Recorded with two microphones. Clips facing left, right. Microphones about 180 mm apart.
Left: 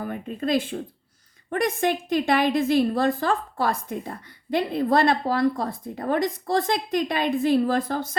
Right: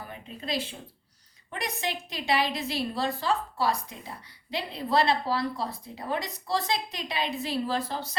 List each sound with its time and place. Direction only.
0.0 s a woman's voice: 50° left (ahead or behind)